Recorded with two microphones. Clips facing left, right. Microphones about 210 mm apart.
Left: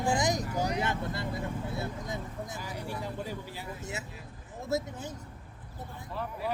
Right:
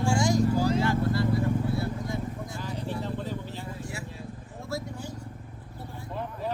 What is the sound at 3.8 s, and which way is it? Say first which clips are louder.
Vehicle: right 2 dB; 20° left (ahead or behind).